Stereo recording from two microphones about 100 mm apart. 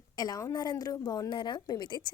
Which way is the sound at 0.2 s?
40° left (ahead or behind).